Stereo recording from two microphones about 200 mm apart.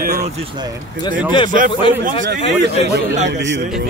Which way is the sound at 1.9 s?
65° right (ahead or behind).